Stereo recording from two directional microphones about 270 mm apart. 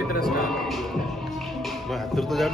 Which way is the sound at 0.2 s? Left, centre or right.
Centre.